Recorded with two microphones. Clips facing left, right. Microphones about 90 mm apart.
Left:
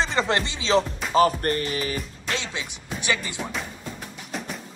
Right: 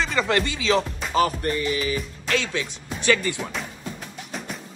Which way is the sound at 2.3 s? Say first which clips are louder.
Right 5 dB; 20° left (ahead or behind).